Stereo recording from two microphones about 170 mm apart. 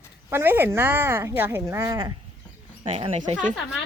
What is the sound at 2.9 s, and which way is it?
Speech, 35° right (ahead or behind).